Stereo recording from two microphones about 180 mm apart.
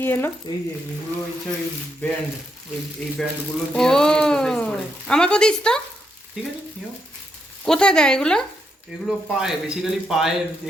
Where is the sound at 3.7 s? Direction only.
5° left (ahead or behind).